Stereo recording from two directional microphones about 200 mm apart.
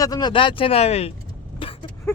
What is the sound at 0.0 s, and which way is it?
Speech, 20° left (ahead or behind).